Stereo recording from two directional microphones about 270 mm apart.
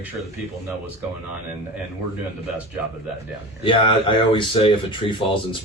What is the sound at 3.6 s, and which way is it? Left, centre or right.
Speech, centre.